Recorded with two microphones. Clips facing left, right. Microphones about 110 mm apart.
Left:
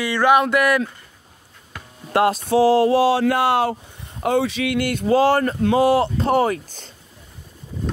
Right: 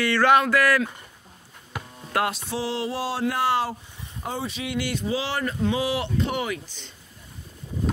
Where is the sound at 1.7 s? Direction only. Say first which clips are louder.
Right 3 dB; 15° right (ahead or behind).